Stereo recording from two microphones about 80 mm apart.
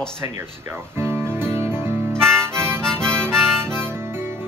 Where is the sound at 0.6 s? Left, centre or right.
Right.